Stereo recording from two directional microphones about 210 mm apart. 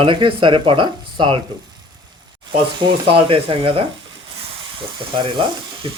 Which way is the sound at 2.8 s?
25° right (ahead or behind).